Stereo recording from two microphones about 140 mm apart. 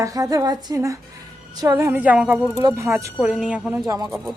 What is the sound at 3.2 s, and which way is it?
Speech, 5° right (ahead or behind).